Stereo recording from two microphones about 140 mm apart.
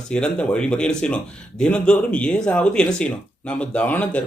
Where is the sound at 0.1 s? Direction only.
5° left (ahead or behind).